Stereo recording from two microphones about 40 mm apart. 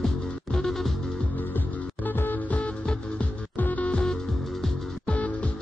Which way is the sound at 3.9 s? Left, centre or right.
Centre.